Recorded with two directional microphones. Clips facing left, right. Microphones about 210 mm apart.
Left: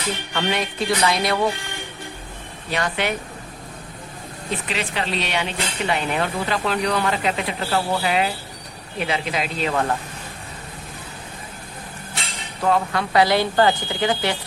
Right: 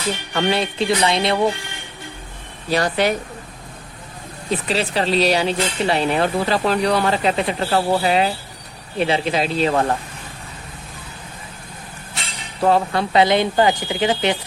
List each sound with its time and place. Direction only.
0.3 s speech: 30° right (ahead or behind)
2.6 s speech: 35° right (ahead or behind)
4.7 s speech: 35° right (ahead or behind)
12.6 s speech: 30° right (ahead or behind)